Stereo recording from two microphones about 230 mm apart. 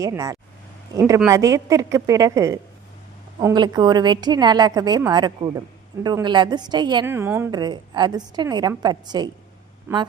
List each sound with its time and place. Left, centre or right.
0.0 s a woman's voice: centre